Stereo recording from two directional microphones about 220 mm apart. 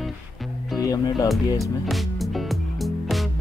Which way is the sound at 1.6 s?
Centre (ahead or behind).